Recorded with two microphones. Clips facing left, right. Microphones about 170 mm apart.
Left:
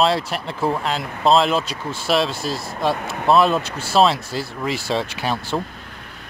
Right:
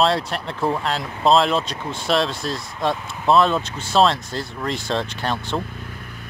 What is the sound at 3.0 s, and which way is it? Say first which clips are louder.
Speech: left 6 dB; 65° left (ahead or behind).